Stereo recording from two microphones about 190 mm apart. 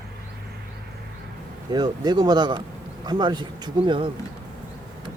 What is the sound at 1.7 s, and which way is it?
Speech, 20° right (ahead or behind).